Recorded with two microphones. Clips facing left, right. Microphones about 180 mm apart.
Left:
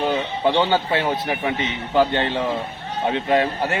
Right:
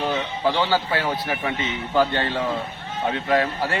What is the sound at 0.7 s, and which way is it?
A man's voice, 20° left (ahead or behind).